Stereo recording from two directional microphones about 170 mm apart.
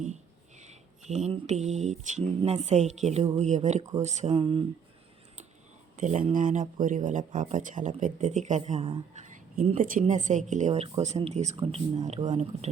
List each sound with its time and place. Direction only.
0.0 s a sound: 45° right (ahead or behind)
1.3 s speech: 40° right (ahead or behind)
4.4 s speech: 30° right (ahead or behind)
6.0 s speech: 45° right (ahead or behind)
9.7 s speech: 55° right (ahead or behind)